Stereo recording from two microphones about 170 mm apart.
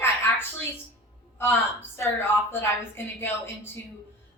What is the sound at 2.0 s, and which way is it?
A woman's voice, 15° left (ahead or behind).